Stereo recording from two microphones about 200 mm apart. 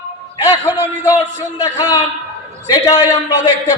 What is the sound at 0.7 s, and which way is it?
Music, 10° right (ahead or behind).